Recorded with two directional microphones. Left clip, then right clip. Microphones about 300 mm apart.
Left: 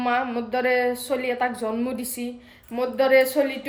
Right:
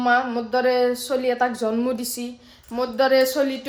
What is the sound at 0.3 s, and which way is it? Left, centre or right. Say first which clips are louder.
A woman's voice: right 2 dB; centre.